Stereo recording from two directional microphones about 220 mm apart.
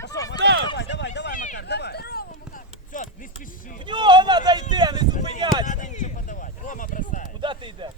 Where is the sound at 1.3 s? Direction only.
35° left (ahead or behind).